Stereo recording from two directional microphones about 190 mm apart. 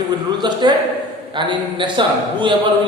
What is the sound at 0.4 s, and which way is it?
Speech, 25° right (ahead or behind).